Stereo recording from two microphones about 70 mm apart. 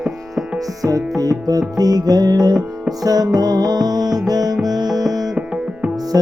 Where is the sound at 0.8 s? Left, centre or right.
Right.